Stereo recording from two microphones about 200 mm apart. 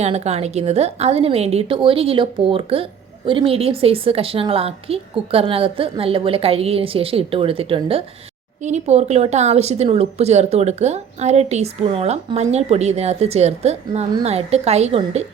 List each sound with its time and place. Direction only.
0.0 s a woman's voice: 30° right (ahead or behind)